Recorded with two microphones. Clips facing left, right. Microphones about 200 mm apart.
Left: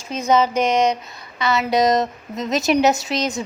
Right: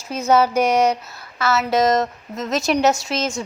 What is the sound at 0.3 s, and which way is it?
A woman's voice, 10° right (ahead or behind).